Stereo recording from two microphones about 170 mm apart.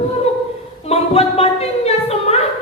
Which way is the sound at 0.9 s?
35° left (ahead or behind).